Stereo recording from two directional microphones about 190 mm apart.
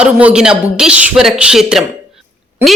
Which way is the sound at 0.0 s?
5° right (ahead or behind).